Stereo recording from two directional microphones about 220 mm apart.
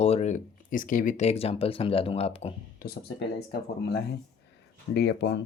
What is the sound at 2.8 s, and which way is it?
Speech, 45° left (ahead or behind).